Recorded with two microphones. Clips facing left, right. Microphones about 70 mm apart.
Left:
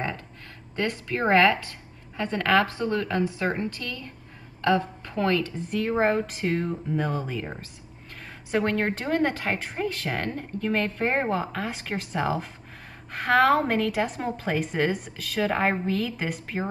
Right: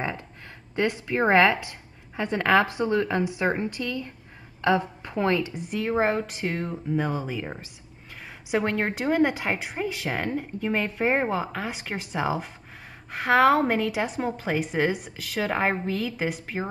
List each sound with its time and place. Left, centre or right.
0.7 s a woman's voice: centre